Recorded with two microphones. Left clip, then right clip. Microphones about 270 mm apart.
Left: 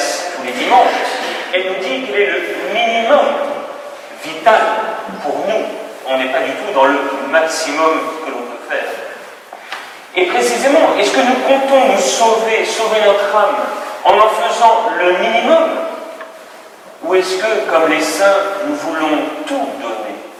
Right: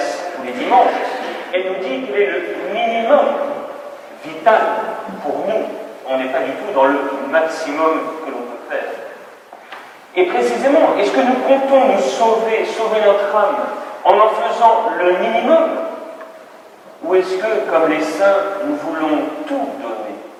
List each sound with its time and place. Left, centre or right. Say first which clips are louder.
0.0 s a sound: left 3 dB; centre
0.3 s a man's voice: left 2 dB; centre
5.2 s a man's voice: left 2 dB; right
6.1 s a man's voice: left 3 dB; centre
10.2 s a woman's voice: left 2 dB; centre
17.1 s a man's voice: left 2 dB; centre